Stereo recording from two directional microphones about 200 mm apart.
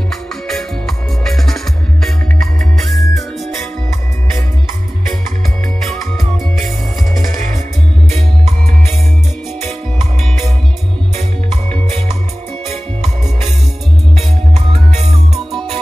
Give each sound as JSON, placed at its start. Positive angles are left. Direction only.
{"t": 0.1, "sound": "music", "side_deg": 0}
{"t": 5.8, "sound": "music", "side_deg": 0}
{"t": 14.1, "sound": "music", "side_deg": -30}
{"t": 15.3, "sound": "music", "side_deg": 0}